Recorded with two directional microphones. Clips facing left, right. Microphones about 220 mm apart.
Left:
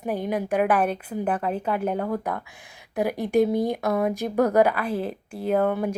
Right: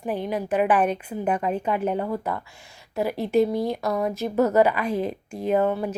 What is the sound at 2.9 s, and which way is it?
A woman's voice, 15° left (ahead or behind).